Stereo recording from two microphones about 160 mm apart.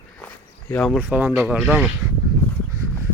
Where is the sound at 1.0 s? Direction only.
10° right (ahead or behind).